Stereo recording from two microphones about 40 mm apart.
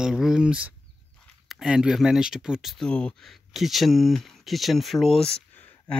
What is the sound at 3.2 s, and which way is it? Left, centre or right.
Speech, centre.